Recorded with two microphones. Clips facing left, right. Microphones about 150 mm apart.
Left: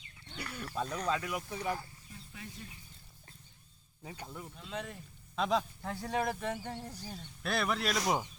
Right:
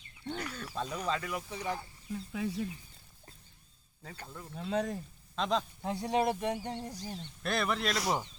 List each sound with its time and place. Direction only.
0.5 s speech: 5° left (ahead or behind)
0.9 s speech: 5° right (ahead or behind)
1.1 s speech: 5° left (ahead or behind)
2.0 s speech: 90° right
4.0 s speech: 15° left (ahead or behind)
4.5 s speech: 45° right (ahead or behind)
5.4 s speech: 5° left (ahead or behind)
5.8 s speech: 20° right (ahead or behind)
7.2 s speech: centre (ahead or behind)